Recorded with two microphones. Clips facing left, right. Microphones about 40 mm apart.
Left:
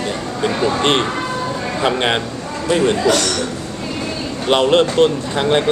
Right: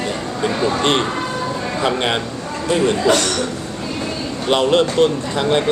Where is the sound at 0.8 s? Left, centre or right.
Left.